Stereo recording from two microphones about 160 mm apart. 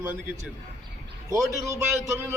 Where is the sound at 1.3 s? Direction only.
20° right (ahead or behind).